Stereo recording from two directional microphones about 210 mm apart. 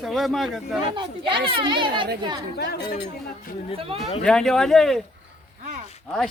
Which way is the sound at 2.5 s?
50° left (ahead or behind).